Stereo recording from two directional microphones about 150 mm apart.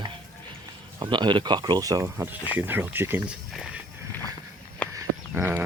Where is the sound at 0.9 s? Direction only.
30° right (ahead or behind); by 3.2 s 15° right (ahead or behind).